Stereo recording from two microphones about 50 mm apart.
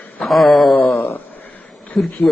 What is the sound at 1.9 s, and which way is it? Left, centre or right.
Speech, centre.